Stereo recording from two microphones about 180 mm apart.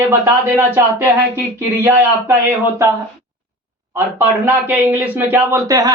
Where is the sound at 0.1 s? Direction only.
10° right (ahead or behind).